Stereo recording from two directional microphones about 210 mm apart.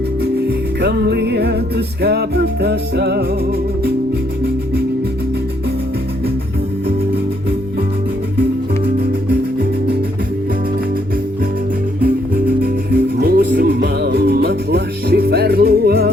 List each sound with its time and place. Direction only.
0.8 s music: 50° right (ahead or behind)
4.4 s music: 50° right (ahead or behind)
8.4 s music: 50° right (ahead or behind)
12.0 s music: 45° right (ahead or behind)